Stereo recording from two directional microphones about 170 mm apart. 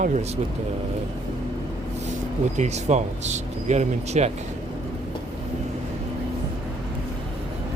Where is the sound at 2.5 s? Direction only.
40° right (ahead or behind).